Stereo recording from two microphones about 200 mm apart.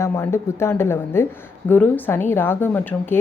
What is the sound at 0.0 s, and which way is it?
A woman's voice, 15° left (ahead or behind).